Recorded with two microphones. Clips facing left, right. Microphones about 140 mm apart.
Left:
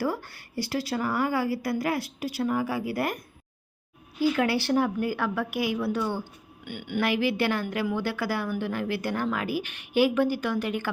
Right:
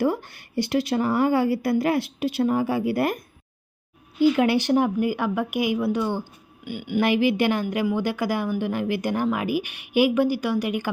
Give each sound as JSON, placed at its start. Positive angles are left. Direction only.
{"t": 0.0, "sound": "a woman's voice", "side_deg": -20}
{"t": 4.2, "sound": "a woman's voice", "side_deg": -20}